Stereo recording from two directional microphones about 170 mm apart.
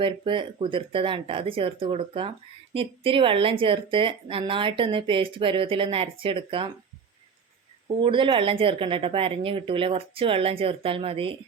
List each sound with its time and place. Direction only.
0.0 s speech: 30° right (ahead or behind)
8.0 s speech: 30° right (ahead or behind)